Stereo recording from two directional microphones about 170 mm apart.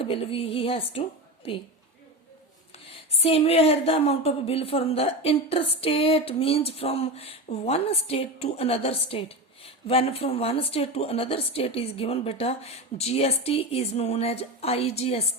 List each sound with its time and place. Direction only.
0.0 s a woman's voice: 35° left (ahead or behind)
2.9 s a woman's voice: 35° left (ahead or behind)